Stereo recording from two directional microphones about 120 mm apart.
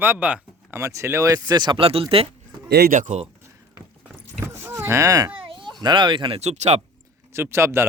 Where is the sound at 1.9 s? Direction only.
50° right (ahead or behind).